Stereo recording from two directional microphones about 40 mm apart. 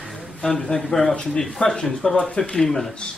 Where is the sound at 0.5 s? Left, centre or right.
Left.